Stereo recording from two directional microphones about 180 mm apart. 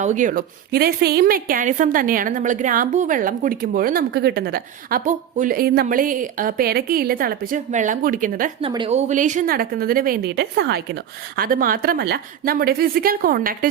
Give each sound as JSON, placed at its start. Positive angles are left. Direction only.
{"t": 0.0, "sound": "a woman's voice", "side_deg": -45}
{"t": 8.6, "sound": "a woman's voice", "side_deg": -30}
{"t": 11.3, "sound": "a woman's voice", "side_deg": -55}